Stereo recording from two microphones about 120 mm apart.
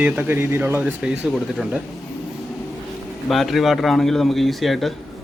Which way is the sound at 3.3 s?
Centre (ahead or behind).